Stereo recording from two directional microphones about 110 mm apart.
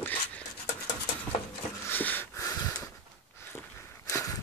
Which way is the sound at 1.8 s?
15° left (ahead or behind).